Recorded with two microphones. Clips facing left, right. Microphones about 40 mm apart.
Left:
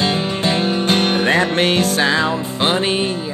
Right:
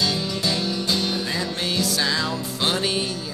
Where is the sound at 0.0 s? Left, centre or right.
Left.